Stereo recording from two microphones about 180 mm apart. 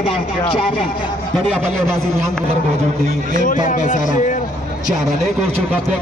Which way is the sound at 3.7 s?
45° left (ahead or behind).